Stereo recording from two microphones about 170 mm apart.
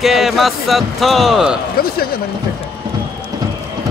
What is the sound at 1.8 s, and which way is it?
Speech, 60° left (ahead or behind).